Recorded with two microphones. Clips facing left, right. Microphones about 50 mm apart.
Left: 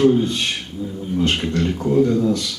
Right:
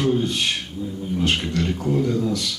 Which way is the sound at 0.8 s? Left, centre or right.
Left.